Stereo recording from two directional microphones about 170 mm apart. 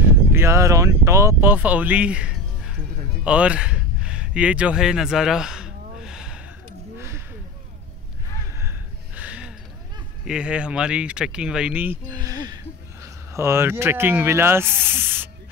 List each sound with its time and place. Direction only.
0.1 s speech: 15° right (ahead or behind)
3.3 s a sound: 5° right (ahead or behind)
7.0 s a sound: 15° right (ahead or behind)
8.5 s gasp: 10° right (ahead or behind)
10.2 s speech: 5° right (ahead or behind)
12.1 s speech: 20° right (ahead or behind)